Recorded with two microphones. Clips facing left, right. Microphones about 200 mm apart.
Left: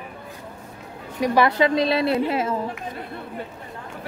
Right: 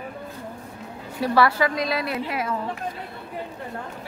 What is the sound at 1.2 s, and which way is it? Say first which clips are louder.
A woman's voice: left 2 dB; 20° left (ahead or behind).